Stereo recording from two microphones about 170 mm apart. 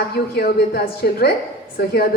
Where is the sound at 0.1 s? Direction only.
70° left (ahead or behind).